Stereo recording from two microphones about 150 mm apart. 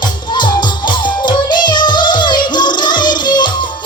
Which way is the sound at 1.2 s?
30° left (ahead or behind).